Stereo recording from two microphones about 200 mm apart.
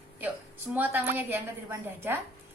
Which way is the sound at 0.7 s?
10° right (ahead or behind).